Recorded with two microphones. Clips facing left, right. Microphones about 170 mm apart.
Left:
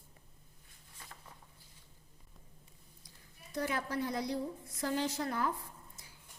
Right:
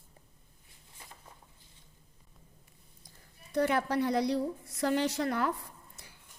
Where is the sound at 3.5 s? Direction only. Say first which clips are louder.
Right 7 dB; 70° right (ahead or behind).